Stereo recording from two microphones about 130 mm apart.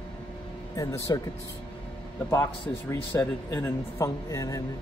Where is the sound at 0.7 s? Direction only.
25° left (ahead or behind).